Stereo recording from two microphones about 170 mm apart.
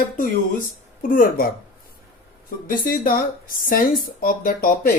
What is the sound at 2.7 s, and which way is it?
Speech, 55° left (ahead or behind).